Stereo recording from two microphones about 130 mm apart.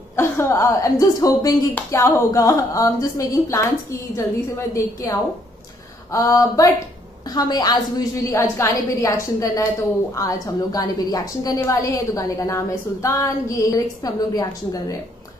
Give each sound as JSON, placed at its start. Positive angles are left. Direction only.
{"t": 0.1, "sound": "a woman's voice", "side_deg": 20}